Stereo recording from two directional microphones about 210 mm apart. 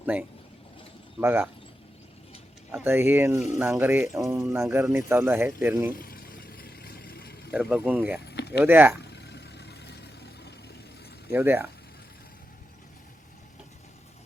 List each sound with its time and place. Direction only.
0.0 s speech: 5° right (ahead or behind)
2.7 s speech: 10° right (ahead or behind)
5.9 s vehicle: 45° left (ahead or behind)
7.5 s speech: 5° right (ahead or behind)
8.2 s a sound: 50° left (ahead or behind)
8.6 s speech: 10° right (ahead or behind)
9.0 s a sound: 50° left (ahead or behind)
11.3 s speech: 10° right (ahead or behind)